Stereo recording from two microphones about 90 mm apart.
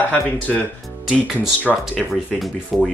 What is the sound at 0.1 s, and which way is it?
Speech, 20° left (ahead or behind).